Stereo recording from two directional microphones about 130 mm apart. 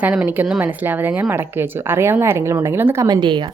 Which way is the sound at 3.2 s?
35° right (ahead or behind).